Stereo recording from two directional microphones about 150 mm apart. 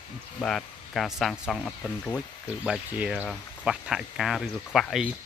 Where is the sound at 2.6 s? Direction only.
5° right (ahead or behind).